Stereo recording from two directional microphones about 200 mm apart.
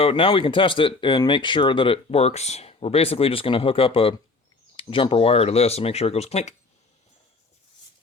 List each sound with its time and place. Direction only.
0.0 s speech: 25° left (ahead or behind)